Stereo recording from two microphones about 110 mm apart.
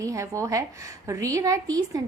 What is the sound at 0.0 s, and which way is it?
A woman's voice, 30° right (ahead or behind).